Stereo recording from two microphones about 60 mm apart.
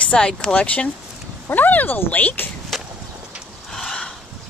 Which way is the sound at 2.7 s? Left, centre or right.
Centre.